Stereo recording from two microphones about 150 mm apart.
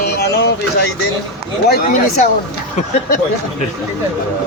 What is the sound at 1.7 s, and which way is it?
Speech, 65° left (ahead or behind).